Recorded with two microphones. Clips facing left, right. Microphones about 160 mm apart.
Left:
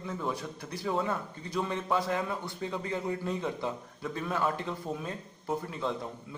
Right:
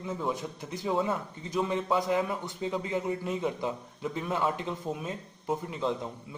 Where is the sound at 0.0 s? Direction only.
20° right (ahead or behind).